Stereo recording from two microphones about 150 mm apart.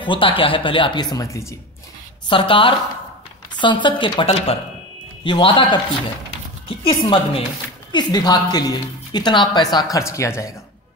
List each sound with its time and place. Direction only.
0.0 s speech: 35° left (ahead or behind)
2.2 s speech: 35° left (ahead or behind)
6.8 s speech: 35° left (ahead or behind)